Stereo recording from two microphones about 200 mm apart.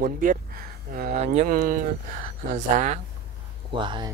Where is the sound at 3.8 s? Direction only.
25° right (ahead or behind).